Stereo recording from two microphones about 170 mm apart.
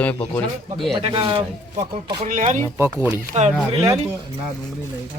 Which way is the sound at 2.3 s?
50° right (ahead or behind).